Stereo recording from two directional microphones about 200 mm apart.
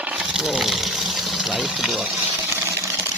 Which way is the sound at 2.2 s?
10° right (ahead or behind).